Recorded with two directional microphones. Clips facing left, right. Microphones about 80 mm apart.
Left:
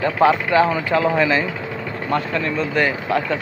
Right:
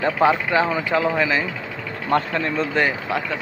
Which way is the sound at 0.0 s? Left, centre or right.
Centre.